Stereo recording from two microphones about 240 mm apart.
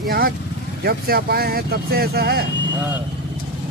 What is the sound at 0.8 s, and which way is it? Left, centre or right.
Speech, right.